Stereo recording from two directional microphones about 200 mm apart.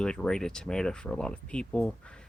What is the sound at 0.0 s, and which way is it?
Speech, 5° left (ahead or behind).